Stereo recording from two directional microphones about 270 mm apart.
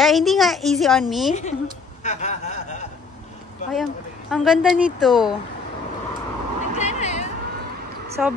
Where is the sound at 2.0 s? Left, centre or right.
Left.